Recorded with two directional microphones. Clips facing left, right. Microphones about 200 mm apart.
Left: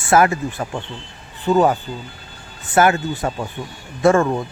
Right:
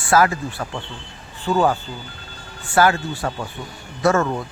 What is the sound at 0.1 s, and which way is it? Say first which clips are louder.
Speech: left 2 dB; 25° left (ahead or behind).